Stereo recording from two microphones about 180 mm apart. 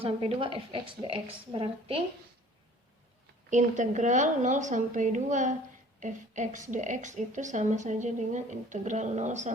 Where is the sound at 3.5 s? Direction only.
45° right (ahead or behind).